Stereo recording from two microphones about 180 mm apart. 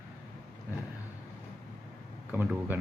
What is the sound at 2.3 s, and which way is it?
Speech, 10° right (ahead or behind).